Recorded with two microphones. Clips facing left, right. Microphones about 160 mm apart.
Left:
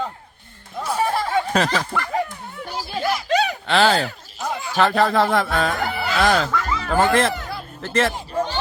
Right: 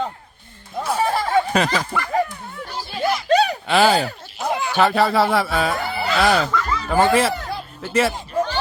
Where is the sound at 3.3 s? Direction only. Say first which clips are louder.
Right 4 dB; 35° right (ahead or behind).